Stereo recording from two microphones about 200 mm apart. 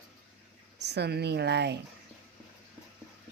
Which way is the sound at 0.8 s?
55° right (ahead or behind).